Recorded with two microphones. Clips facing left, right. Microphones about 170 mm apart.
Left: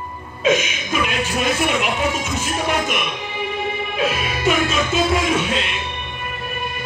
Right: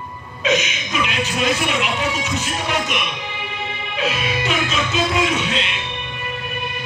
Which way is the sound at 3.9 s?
50° left (ahead or behind).